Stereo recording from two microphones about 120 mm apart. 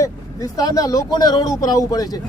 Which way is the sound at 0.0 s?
30° left (ahead or behind).